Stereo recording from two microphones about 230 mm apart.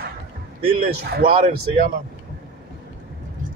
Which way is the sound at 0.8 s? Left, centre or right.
Right.